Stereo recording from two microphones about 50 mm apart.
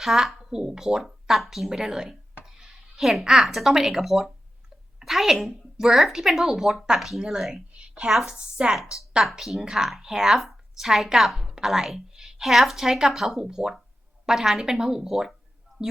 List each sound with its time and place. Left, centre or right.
0.0 s a woman's voice: centre
7.7 s a sound: right
8.1 s a woman's voice: centre
8.4 s speech: centre
9.0 s speech: centre